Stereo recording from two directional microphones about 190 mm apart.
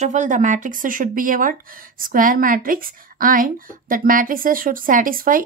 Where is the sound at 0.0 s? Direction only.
40° right (ahead or behind).